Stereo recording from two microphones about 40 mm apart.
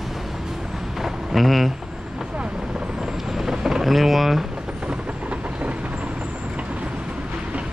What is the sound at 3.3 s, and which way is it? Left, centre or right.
Vehicle, centre.